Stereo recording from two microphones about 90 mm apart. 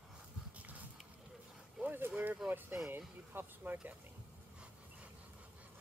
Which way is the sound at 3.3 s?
20° right (ahead or behind).